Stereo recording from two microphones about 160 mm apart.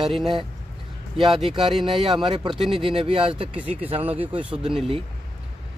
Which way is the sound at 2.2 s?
30° right (ahead or behind).